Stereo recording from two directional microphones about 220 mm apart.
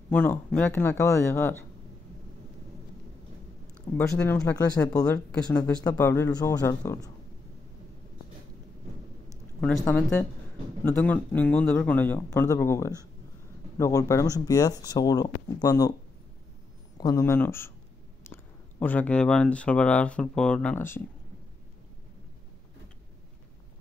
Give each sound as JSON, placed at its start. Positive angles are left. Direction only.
{"t": 0.1, "sound": "speech", "side_deg": 5}
{"t": 3.9, "sound": "speech", "side_deg": 10}
{"t": 9.6, "sound": "speech", "side_deg": 5}
{"t": 17.0, "sound": "speech", "side_deg": 15}